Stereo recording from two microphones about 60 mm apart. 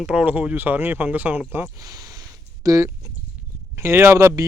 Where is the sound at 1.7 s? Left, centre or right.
Right.